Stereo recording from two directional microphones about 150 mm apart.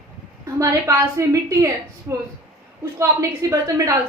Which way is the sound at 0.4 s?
20° right (ahead or behind).